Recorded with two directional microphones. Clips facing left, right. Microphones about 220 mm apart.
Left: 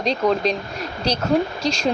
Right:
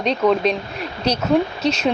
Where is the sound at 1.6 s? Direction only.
5° right (ahead or behind).